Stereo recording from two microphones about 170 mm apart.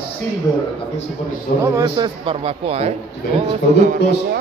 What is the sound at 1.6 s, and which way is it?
Speech, 20° right (ahead or behind).